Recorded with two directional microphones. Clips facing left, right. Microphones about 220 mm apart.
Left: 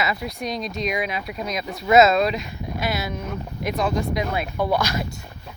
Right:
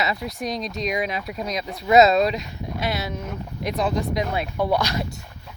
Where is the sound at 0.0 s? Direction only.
35° right (ahead or behind).